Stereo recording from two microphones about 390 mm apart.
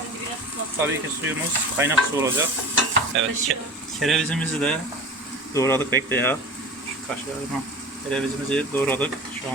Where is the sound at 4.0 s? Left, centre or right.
Centre.